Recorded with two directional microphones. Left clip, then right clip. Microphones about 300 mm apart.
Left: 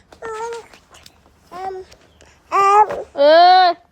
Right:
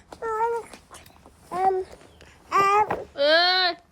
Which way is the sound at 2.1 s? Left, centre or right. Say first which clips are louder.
Left 5 dB; centre.